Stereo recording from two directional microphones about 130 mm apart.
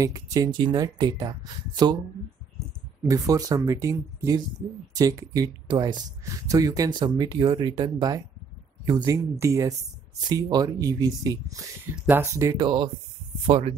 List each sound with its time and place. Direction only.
0.0 s speech: 25° right (ahead or behind)
3.0 s speech: 25° right (ahead or behind)
12.5 s speech: 35° right (ahead or behind)
13.5 s speech: 55° right (ahead or behind)